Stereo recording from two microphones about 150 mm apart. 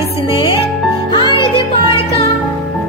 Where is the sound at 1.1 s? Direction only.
30° left (ahead or behind).